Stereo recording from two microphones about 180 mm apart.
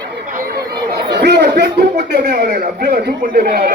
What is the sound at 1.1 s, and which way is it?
Chatter, 65° right (ahead or behind).